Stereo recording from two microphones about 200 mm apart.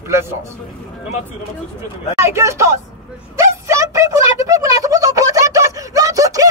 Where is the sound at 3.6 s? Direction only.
15° right (ahead or behind).